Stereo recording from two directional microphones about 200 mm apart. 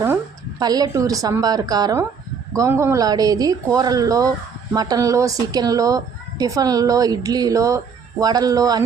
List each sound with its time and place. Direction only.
0.6 s a woman's voice: 20° right (ahead or behind)